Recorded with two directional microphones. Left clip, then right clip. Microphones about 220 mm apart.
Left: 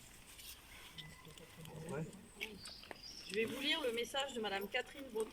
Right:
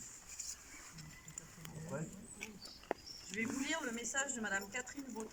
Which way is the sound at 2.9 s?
40° right (ahead or behind).